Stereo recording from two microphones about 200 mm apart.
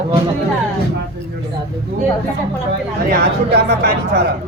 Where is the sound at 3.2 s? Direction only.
55° right (ahead or behind).